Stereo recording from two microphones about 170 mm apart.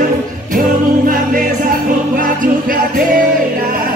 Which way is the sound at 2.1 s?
55° right (ahead or behind).